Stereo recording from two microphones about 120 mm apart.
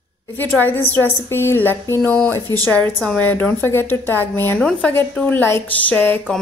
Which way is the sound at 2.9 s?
Centre (ahead or behind).